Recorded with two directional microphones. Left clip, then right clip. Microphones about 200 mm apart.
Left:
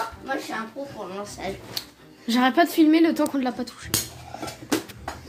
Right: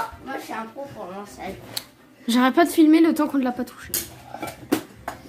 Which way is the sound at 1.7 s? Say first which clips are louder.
Even; 15° right (ahead or behind).